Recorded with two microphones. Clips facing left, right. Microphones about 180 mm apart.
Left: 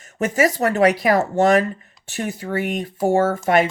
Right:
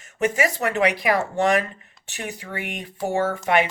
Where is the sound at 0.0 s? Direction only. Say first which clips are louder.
Left 3 dB; 40° left (ahead or behind).